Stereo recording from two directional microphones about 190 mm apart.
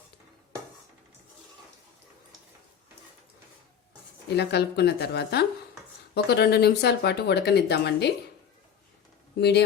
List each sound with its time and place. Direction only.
4.4 s speech: 60° left (ahead or behind)
9.4 s speech: 60° left (ahead or behind)